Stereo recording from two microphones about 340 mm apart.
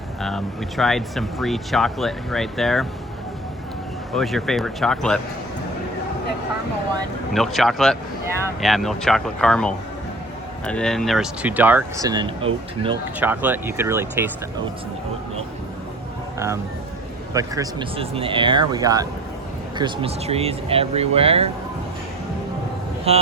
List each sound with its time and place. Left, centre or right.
0.2 s speech: centre
4.1 s speech: centre
7.3 s speech: centre
13.1 s speech: centre
17.3 s speech: centre
23.1 s speech: centre